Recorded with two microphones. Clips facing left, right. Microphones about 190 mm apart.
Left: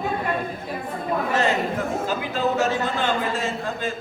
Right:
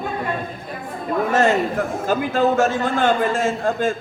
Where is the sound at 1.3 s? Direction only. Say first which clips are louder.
Right 6 dB; 50° right (ahead or behind).